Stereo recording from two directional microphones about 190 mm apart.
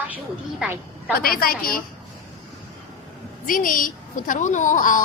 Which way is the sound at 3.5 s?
45° left (ahead or behind).